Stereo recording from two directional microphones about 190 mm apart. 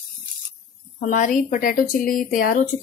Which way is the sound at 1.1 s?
45° left (ahead or behind).